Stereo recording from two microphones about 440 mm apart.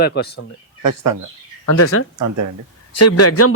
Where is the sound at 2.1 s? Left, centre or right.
Right.